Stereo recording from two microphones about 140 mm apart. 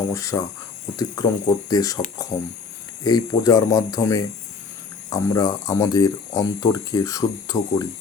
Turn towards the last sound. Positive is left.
turn(degrees=25)  # may be behind; listen again after turning